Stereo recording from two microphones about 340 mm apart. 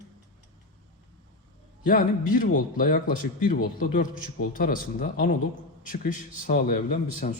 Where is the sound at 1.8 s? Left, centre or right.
Left.